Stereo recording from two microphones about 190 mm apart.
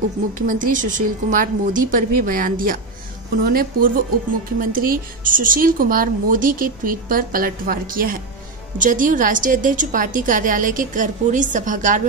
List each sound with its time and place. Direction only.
0.3 s speech: 45° right (ahead or behind)